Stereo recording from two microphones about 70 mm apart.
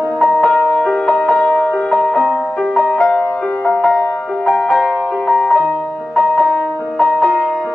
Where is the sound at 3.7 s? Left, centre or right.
Centre.